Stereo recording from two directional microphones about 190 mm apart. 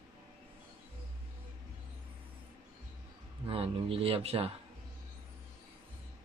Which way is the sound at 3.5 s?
30° right (ahead or behind).